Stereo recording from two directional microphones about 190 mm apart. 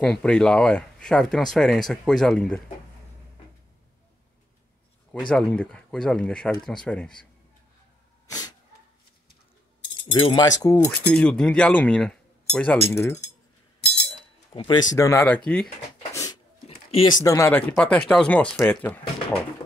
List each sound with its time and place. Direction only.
0.0 s speech: 5° left (ahead or behind)
5.3 s speech: 5° left (ahead or behind)
8.3 s a sound: 20° left (ahead or behind)
10.9 s speech: 10° left (ahead or behind)
13.7 s chink: 60° left (ahead or behind)
14.5 s speech: 25° left (ahead or behind)
15.0 s speech: 15° left (ahead or behind)
16.1 s a sound: 15° left (ahead or behind)
16.6 s a sound: 30° left (ahead or behind)
17.2 s speech: 15° left (ahead or behind)